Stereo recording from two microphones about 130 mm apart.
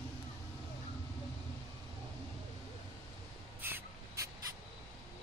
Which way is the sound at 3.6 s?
15° right (ahead or behind).